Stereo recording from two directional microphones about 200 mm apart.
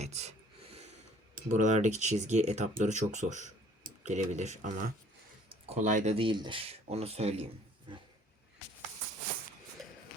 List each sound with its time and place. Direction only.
0.0 s a sound: 35° right (ahead or behind)
1.5 s speech: 35° right (ahead or behind)
7.9 s roaring cats: 25° right (ahead or behind)
9.8 s shuffle: centre (ahead or behind)